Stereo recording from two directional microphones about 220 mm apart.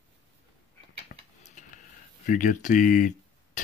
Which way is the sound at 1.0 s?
35° left (ahead or behind).